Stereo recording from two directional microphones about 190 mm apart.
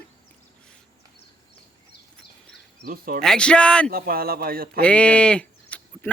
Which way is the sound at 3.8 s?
50° right (ahead or behind).